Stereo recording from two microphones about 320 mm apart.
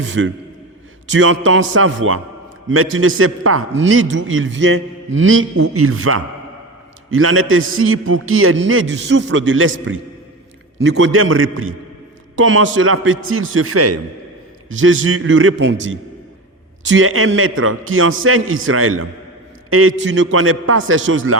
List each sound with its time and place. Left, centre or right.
0.0 s a man's voice: right